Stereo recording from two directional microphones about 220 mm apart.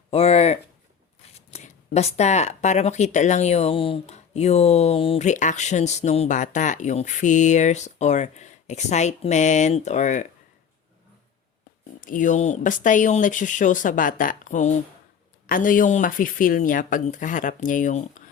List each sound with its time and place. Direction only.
0.1 s speech: 25° left (ahead or behind)
11.9 s speech: 40° left (ahead or behind)